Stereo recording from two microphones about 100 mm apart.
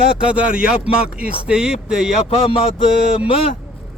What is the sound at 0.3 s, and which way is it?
Speech, 10° right (ahead or behind).